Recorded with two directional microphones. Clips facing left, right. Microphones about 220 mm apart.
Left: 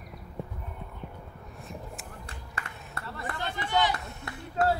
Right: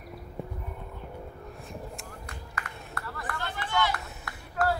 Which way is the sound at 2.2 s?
25° left (ahead or behind).